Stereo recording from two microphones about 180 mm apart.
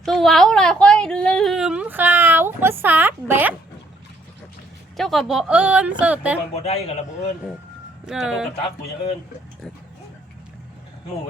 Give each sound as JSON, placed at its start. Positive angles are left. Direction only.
{"t": 0.0, "sound": "a sound", "side_deg": 0}
{"t": 4.9, "sound": "speech", "side_deg": 0}
{"t": 6.5, "sound": "a man's voice", "side_deg": 35}
{"t": 8.0, "sound": "speech", "side_deg": -5}